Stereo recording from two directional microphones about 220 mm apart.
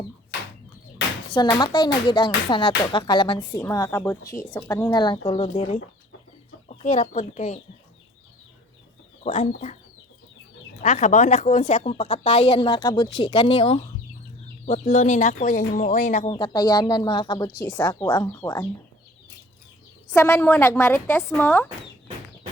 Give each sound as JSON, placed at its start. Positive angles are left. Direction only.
{"t": 1.3, "sound": "speech", "side_deg": 20}
{"t": 9.2, "sound": "speech", "side_deg": 30}
{"t": 10.8, "sound": "speech", "side_deg": 30}
{"t": 16.3, "sound": "speech", "side_deg": 20}
{"t": 20.1, "sound": "speech", "side_deg": 10}